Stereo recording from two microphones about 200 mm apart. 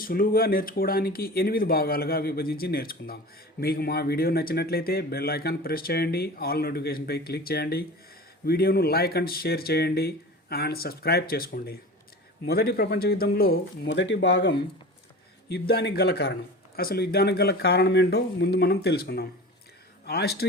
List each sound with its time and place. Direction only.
0.0 s speech: 45° left (ahead or behind)